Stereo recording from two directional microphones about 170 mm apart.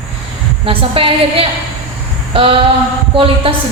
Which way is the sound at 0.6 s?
30° right (ahead or behind).